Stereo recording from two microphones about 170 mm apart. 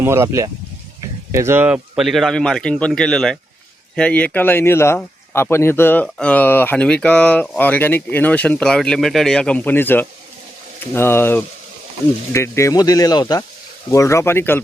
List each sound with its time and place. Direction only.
0.0 s speech: 15° right (ahead or behind); by 14.6 s 15° left (ahead or behind)